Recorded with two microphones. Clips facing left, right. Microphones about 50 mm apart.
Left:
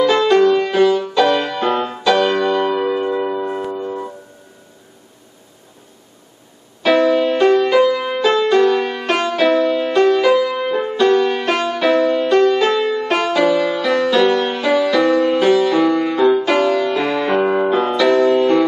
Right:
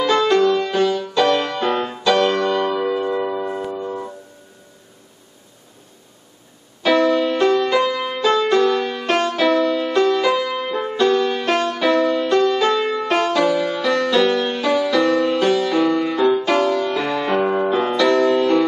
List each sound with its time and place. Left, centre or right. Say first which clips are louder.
0.0 s music: left 3 dB; centre
3.1 s a sound: left 2 dB; centre
3.3 s music: left 2 dB; centre
6.8 s music: left 2 dB; centre
14.4 s music: left 3 dB; centre
16.5 s music: left 2 dB; centre
16.9 s music: left 3 dB; centre
17.5 s music: left 3 dB; centre
17.7 s music: left 1 dB; centre